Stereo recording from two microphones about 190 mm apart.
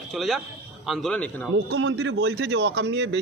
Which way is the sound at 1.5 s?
80° right.